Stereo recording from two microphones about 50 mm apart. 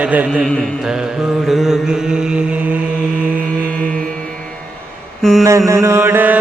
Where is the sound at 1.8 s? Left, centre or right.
Centre.